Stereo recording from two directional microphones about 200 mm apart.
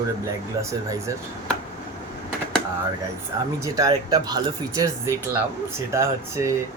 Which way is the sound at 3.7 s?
20° right (ahead or behind).